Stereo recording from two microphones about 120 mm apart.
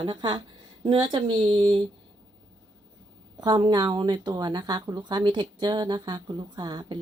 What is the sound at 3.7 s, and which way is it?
Speech, 40° right (ahead or behind).